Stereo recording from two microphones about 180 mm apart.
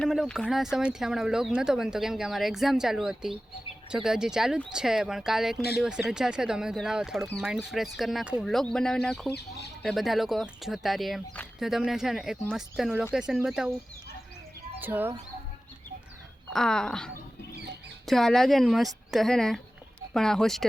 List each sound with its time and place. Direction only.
0.0 s speech: centre (ahead or behind)
14.8 s speech: 10° right (ahead or behind)
16.5 s speech: 5° left (ahead or behind)